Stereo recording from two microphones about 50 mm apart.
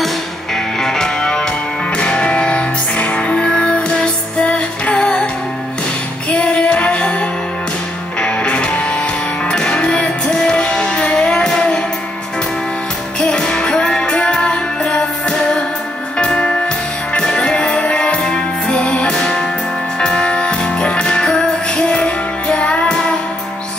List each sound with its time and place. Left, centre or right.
0.7 s music: centre
6.3 s music: left
13.2 s music: centre